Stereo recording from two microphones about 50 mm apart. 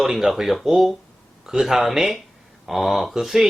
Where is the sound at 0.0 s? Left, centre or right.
Centre.